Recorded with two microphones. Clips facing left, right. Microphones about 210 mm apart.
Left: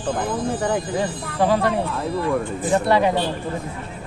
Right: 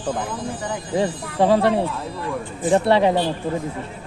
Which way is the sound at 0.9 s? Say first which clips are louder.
Right 2 dB; 25° right (ahead or behind).